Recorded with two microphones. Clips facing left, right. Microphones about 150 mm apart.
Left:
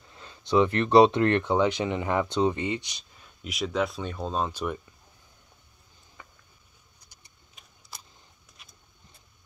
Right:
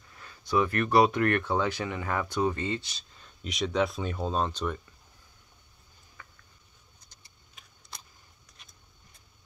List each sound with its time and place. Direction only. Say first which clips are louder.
0.1 s speech: left 4 dB; 25° left (ahead or behind)
6.2 s a sound: left 2 dB; 20° left (ahead or behind)
7.9 s single-lens reflex camera: left 1 dB; 5° left (ahead or behind)